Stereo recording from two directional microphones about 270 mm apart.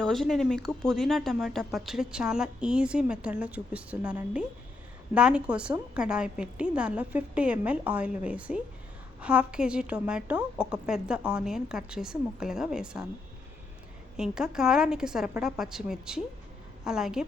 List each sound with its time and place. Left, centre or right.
0.0 s speech: centre
14.2 s speech: centre